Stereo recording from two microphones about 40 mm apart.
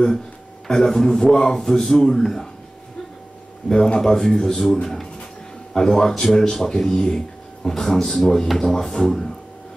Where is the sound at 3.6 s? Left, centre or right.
Centre.